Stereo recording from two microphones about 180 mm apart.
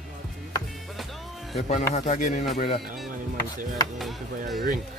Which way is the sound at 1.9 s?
45° left (ahead or behind).